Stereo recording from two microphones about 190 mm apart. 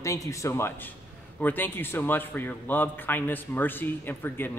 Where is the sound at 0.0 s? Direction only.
15° left (ahead or behind).